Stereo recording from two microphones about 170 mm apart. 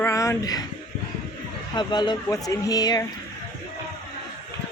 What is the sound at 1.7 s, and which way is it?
Speech, 25° left (ahead or behind).